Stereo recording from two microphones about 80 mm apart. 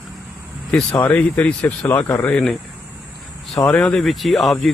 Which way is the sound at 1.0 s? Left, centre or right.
Centre.